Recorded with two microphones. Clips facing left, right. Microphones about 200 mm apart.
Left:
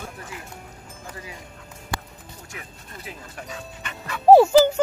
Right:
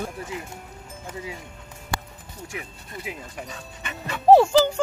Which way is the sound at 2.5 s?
15° right (ahead or behind).